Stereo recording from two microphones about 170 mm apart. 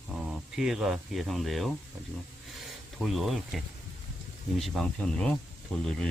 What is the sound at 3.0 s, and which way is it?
Speech, centre (ahead or behind).